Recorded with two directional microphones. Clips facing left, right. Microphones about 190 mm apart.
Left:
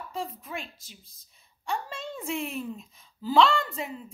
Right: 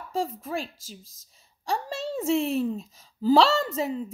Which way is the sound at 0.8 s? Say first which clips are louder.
Right 8 dB; 90° right.